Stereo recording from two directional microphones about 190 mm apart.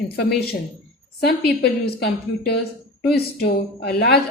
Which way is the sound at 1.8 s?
60° left (ahead or behind).